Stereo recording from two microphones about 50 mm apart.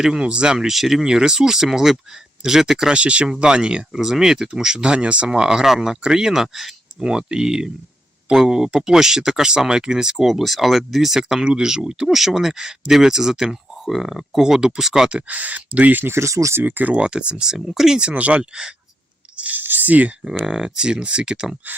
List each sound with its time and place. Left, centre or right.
0.0 s speech: centre
7.1 s speech: centre
15.3 s speech: right
16.1 s speech: right
16.6 s speech: right
16.9 s speech: right
18.1 s speech: right
19.4 s a sound: right
20.4 s speech: centre